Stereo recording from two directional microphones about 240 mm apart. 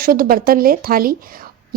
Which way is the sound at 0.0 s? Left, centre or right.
Right.